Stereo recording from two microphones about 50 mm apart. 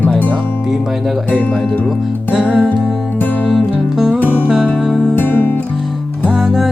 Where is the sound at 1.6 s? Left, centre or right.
Left.